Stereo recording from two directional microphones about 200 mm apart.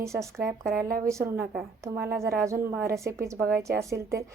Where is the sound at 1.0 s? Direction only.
15° right (ahead or behind).